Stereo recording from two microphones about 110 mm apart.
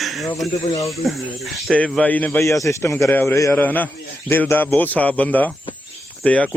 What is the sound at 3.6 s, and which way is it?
Speech, 15° left (ahead or behind).